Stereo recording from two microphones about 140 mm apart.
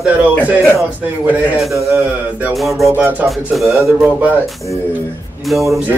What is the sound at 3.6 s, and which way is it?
Speech, 20° right (ahead or behind).